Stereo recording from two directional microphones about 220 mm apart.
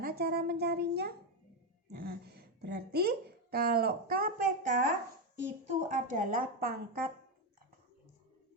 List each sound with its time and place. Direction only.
0.0 s a child's voice: 45° right (ahead or behind)